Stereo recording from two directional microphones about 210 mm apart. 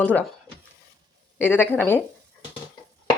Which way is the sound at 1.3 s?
10° left (ahead or behind).